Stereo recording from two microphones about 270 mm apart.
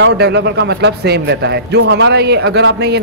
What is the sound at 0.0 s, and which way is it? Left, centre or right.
A man's voice, right.